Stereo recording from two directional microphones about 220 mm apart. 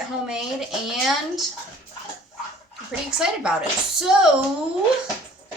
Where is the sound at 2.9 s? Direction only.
5° right (ahead or behind).